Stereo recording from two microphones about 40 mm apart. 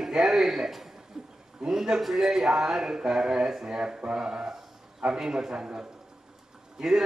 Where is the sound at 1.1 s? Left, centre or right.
Centre.